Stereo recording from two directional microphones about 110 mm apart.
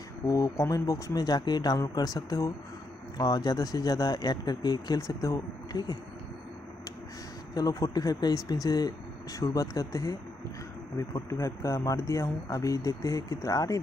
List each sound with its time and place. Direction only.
0.3 s speech: 30° left (ahead or behind)
7.5 s speech: 35° left (ahead or behind)